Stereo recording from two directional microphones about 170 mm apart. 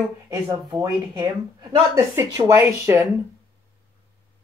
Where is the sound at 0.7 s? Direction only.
25° right (ahead or behind).